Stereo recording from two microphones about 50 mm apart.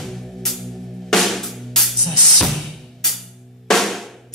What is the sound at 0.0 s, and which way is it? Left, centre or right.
Music, centre.